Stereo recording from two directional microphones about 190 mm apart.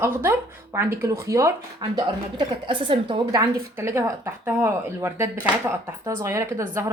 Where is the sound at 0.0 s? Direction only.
15° right (ahead or behind).